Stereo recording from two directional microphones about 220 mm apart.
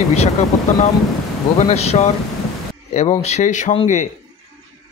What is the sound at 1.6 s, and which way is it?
Speech, 30° left (ahead or behind).